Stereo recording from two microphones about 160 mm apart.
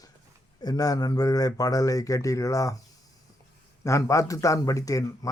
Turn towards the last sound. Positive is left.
turn(degrees=20)  # may be behind; listen again after turning